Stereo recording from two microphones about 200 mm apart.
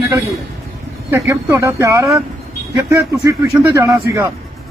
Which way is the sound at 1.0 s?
10° right (ahead or behind).